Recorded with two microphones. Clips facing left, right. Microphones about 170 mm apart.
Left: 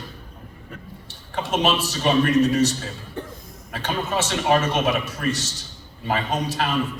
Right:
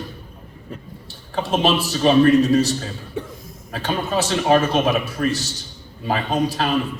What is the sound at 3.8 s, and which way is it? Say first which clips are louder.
Speech: right 3 dB; 35° right (ahead or behind).